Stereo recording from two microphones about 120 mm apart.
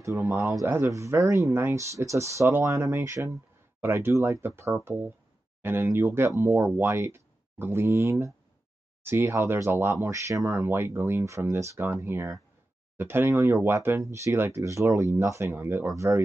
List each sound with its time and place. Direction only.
0.0 s speech: 20° right (ahead or behind)